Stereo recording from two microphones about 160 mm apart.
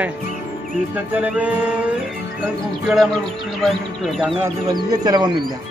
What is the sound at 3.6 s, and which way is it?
Speech, centre (ahead or behind).